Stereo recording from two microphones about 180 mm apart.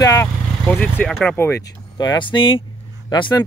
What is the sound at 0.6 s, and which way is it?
Speech, 5° left (ahead or behind).